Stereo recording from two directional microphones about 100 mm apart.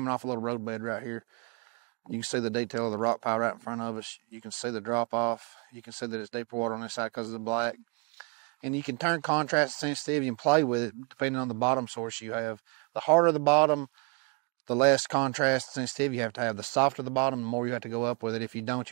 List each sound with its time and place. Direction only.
0.0 s speech: 20° right (ahead or behind)
4.0 s speech: 15° right (ahead or behind)